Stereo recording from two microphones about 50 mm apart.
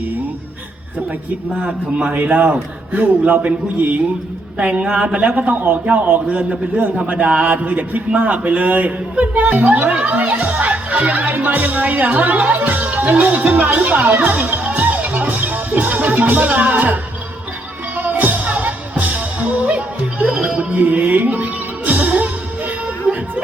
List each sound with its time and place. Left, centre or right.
1.6 s a man's voice: centre
2.1 s a man's voice: right
4.5 s a man's voice: right
14.1 s music: right
23.1 s music: centre